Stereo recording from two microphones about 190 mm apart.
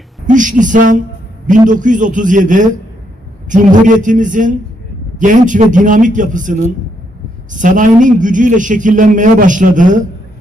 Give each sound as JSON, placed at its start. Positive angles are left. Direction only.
{"t": 0.3, "sound": "a man's voice", "side_deg": -40}